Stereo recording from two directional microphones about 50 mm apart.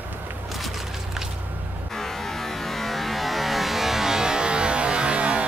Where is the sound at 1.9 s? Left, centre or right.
Centre.